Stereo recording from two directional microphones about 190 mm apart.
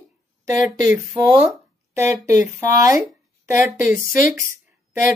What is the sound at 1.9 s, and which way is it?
Speech, 15° right (ahead or behind).